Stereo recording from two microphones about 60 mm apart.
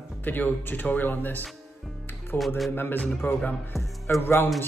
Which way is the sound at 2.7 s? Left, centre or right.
Left.